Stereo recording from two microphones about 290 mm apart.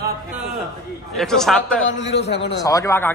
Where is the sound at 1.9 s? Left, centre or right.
Left.